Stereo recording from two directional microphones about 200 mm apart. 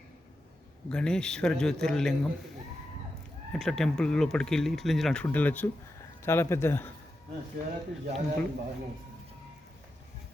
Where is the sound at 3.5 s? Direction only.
Centre (ahead or behind).